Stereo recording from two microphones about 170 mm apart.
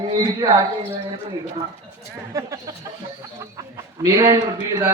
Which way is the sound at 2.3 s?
20° right (ahead or behind).